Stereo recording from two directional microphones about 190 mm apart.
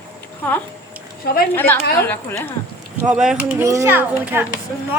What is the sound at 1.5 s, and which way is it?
Speech, 10° left (ahead or behind).